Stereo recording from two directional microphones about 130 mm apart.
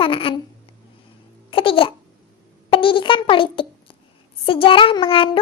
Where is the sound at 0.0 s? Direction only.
45° left (ahead or behind).